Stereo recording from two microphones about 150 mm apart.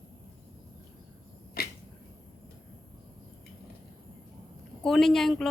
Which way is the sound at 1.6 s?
90° left.